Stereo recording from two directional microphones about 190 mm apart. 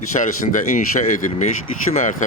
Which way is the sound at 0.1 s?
40° left (ahead or behind).